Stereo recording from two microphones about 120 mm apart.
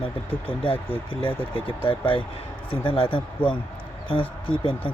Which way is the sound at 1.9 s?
45° left (ahead or behind).